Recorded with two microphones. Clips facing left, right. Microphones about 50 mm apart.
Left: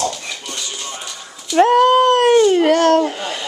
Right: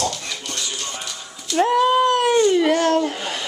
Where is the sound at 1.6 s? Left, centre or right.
Left.